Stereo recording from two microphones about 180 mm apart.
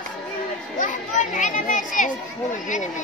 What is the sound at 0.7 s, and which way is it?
Children playing, 45° left (ahead or behind).